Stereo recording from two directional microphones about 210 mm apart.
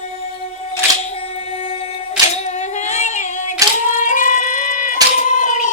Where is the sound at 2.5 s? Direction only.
35° left (ahead or behind).